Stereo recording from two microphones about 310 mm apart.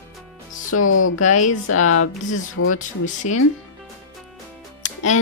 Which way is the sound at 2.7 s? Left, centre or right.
Left.